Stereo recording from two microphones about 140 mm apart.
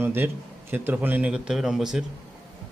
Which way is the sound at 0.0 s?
15° right (ahead or behind).